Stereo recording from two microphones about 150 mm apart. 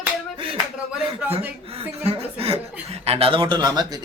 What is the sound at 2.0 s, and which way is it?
Chuckle, 40° right (ahead or behind).